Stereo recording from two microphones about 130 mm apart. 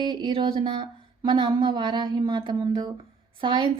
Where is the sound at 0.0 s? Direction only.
35° right (ahead or behind).